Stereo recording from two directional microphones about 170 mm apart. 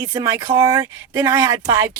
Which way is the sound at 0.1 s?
20° right (ahead or behind).